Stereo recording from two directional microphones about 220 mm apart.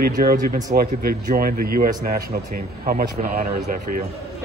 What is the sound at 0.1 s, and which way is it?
A man's voice, 40° right (ahead or behind).